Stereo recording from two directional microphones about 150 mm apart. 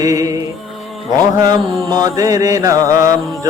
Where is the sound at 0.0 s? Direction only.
20° right (ahead or behind).